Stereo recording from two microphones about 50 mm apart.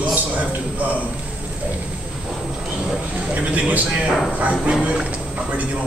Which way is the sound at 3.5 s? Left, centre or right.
Right.